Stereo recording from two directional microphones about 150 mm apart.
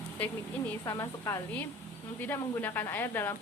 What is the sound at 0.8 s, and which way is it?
Speech, 20° left (ahead or behind).